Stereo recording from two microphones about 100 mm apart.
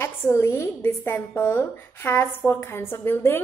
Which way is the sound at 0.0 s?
25° left (ahead or behind).